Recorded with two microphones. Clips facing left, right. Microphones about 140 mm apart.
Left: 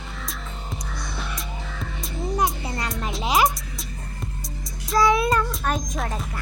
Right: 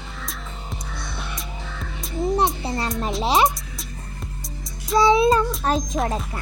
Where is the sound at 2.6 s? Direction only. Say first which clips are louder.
Right 4 dB; 30° right (ahead or behind).